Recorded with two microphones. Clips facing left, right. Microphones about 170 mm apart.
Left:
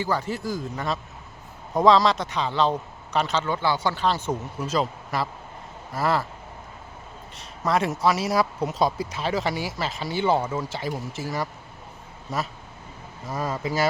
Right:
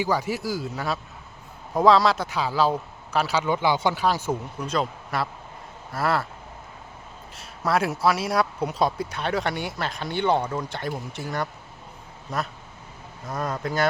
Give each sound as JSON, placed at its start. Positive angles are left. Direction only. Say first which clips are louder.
{"t": 0.0, "sound": "speech", "louder": "right 1 dB", "side_deg": -10}
{"t": 4.6, "sound": "speech", "louder": "left 2 dB", "side_deg": 0}
{"t": 7.3, "sound": "speech", "louder": "even", "side_deg": 0}